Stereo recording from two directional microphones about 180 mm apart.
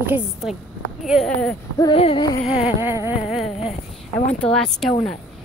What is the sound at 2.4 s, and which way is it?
Speech, 5° right (ahead or behind).